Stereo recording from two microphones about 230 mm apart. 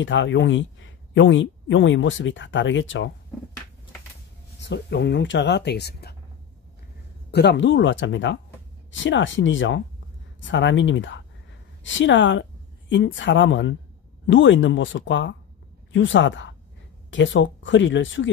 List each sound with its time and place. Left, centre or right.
0.0 s speech: left
4.6 s speech: left
7.2 s a woman's voice: left